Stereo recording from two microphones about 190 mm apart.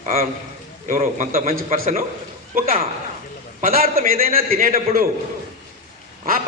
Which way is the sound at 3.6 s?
50° right (ahead or behind).